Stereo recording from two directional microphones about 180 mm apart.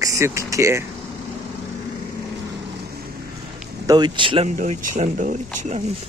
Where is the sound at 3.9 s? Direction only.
25° right (ahead or behind).